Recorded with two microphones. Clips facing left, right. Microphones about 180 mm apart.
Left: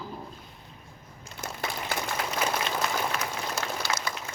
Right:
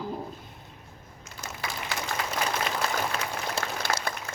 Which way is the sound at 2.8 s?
35° right (ahead or behind).